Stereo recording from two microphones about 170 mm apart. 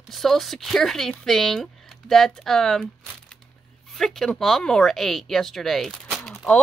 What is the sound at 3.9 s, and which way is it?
Speech, centre (ahead or behind).